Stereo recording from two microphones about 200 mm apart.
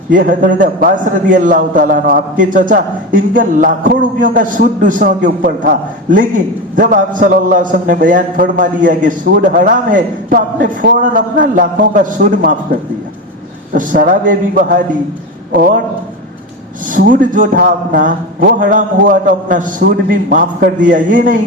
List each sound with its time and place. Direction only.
0.1 s a man's voice: 40° right (ahead or behind)
13.7 s a man's voice: 45° right (ahead or behind)
16.9 s a man's voice: 40° right (ahead or behind)